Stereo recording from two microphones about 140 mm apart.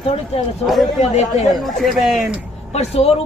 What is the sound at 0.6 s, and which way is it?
Speech, centre (ahead or behind).